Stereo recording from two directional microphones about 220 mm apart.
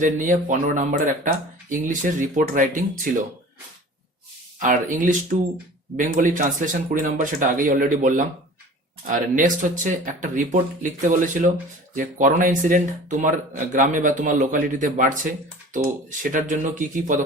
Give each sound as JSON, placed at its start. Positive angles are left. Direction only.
{"t": 0.0, "sound": "speech", "side_deg": -35}
{"t": 4.6, "sound": "speech", "side_deg": -35}